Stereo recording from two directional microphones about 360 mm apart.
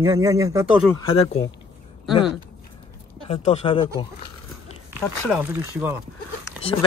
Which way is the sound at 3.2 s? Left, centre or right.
Centre.